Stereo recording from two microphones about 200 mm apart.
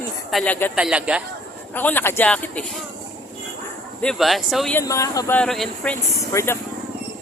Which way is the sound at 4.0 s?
Centre (ahead or behind).